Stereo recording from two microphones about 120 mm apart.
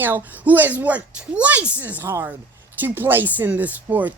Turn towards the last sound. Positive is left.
turn(degrees=-15)  # may be behind; listen again after turning